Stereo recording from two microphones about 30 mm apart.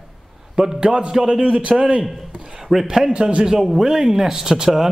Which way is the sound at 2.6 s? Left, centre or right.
Centre.